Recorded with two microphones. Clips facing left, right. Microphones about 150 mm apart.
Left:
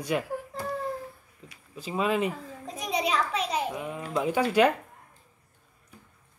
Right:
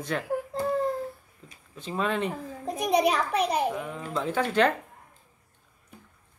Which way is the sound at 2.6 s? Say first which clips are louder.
Right 6 dB; 55° right (ahead or behind).